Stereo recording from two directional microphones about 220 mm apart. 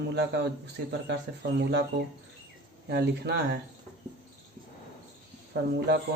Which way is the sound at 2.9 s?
50° right (ahead or behind).